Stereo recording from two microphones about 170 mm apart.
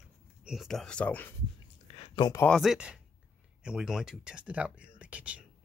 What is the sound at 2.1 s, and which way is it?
Speech, 25° left (ahead or behind).